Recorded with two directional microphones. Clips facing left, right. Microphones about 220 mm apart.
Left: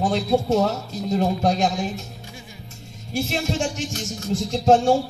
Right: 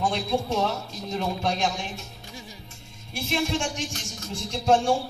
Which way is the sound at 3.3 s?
40° left (ahead or behind).